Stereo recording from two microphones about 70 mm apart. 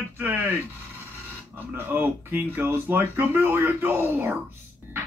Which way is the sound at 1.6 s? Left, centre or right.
Right.